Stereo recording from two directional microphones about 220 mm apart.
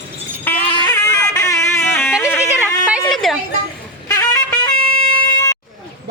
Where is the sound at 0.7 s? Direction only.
20° left (ahead or behind).